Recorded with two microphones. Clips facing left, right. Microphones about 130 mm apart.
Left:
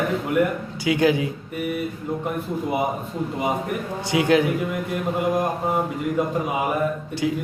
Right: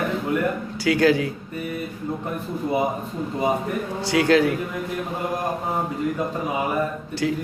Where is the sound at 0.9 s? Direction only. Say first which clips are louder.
Right 1 dB; 20° left (ahead or behind).